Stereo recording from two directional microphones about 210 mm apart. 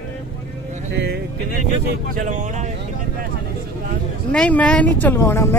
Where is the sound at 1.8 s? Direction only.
40° right (ahead or behind).